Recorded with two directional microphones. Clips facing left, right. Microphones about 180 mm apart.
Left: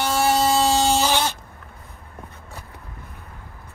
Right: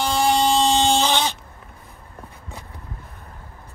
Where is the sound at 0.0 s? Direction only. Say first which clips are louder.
Even; 5° left (ahead or behind).